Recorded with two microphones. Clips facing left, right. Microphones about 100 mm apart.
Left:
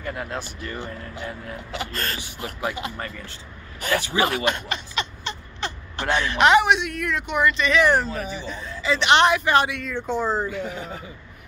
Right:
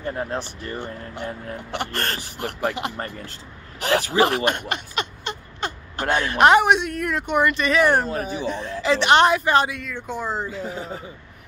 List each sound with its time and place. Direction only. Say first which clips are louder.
0.0 s speech: right 3 dB; 30° right (ahead or behind)
1.1 s speech: right 2 dB; 45° right (ahead or behind)
1.7 s speech: right 3 dB; 60° right (ahead or behind)
4.0 s speech: right 4 dB; 40° right (ahead or behind)
4.3 s speech: right 2 dB; 55° right (ahead or behind)
9.0 s speech: right 1 dB; 40° right (ahead or behind)
10.1 s speech: left 5 dB; 10° right (ahead or behind)
10.5 s speech: even; 30° right (ahead or behind)